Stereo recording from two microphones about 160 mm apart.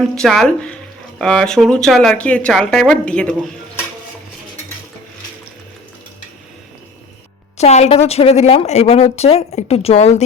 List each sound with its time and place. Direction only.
0.2 s speech: centre (ahead or behind)
7.6 s a woman's voice: 45° left (ahead or behind)